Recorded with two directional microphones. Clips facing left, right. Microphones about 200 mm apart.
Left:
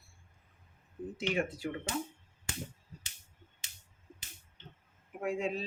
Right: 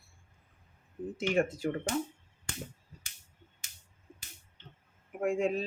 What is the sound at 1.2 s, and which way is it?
Speech, 45° right (ahead or behind).